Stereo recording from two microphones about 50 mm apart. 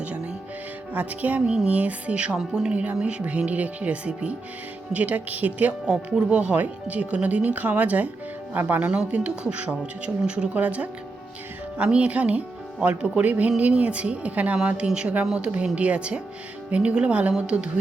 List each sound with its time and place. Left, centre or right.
0.9 s speech: right
2.4 s speech: centre
2.7 s speech: right
5.8 s speech: centre; by 8.8 s right
8.8 s speech: right